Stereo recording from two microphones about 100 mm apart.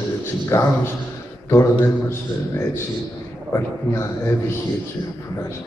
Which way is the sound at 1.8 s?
25° left (ahead or behind).